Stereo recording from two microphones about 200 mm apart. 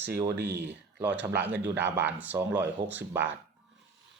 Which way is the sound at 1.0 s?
10° right (ahead or behind).